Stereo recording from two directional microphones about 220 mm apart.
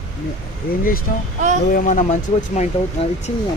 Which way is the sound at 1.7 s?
35° left (ahead or behind).